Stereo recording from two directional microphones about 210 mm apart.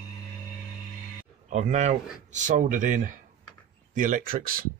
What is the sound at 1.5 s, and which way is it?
Speech, 35° right (ahead or behind).